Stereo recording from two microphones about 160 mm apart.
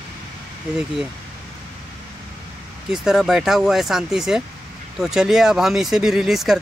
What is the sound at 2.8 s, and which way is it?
Speech, 5° right (ahead or behind).